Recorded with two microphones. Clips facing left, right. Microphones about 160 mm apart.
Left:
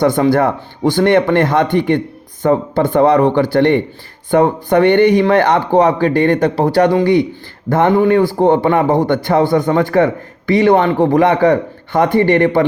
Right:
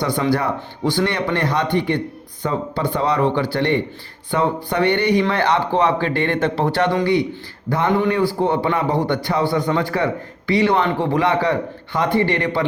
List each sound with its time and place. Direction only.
0.0 s a man's voice: 50° left (ahead or behind)